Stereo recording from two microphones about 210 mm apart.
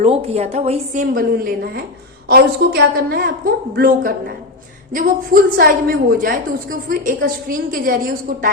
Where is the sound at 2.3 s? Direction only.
45° right (ahead or behind).